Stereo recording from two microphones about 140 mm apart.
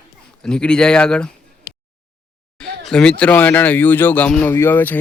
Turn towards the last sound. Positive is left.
turn(degrees=15)  # may be behind; listen again after turning